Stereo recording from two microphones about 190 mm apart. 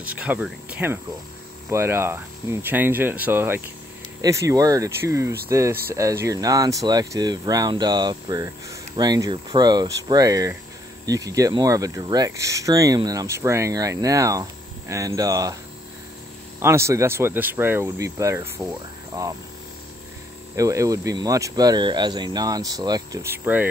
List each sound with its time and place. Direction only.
0.0 s speech: 10° right (ahead or behind)
16.5 s speech: 15° right (ahead or behind)
20.5 s speech: 15° right (ahead or behind)